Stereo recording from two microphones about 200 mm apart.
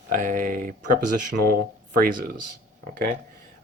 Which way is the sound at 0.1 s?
40° right (ahead or behind).